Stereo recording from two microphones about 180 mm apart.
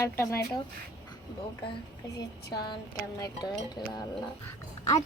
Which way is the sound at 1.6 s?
30° left (ahead or behind).